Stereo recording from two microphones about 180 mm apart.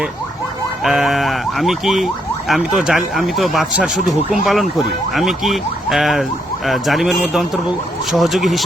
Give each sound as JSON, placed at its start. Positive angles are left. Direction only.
{"t": 0.9, "sound": "speech", "side_deg": 0}